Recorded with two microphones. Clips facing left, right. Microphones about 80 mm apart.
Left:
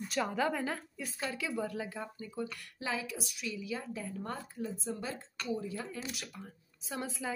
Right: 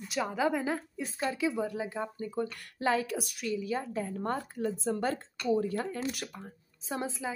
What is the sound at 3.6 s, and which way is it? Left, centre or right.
Speech, right.